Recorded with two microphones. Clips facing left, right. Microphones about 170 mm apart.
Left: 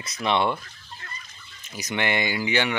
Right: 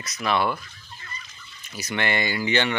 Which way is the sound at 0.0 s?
25° left (ahead or behind).